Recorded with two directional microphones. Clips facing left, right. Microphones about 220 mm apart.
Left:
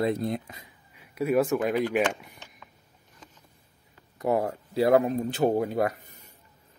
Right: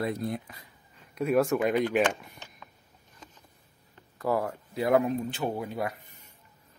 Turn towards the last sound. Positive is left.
turn(degrees=40)  # may be behind; listen again after turning